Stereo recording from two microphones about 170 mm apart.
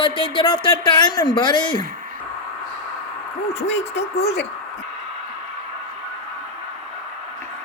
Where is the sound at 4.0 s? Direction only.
35° left (ahead or behind).